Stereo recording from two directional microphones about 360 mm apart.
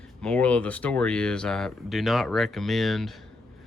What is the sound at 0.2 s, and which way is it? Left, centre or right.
Speech, centre.